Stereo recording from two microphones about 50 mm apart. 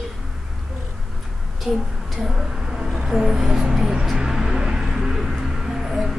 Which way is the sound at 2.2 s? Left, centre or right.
Centre.